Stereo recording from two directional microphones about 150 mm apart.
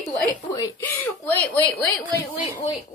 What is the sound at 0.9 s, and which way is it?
Speech, 10° left (ahead or behind).